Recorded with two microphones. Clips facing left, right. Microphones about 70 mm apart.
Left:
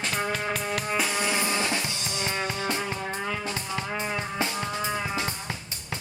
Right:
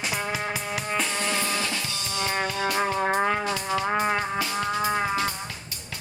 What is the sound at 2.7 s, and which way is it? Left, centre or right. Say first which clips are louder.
Music: right 7 dB; right.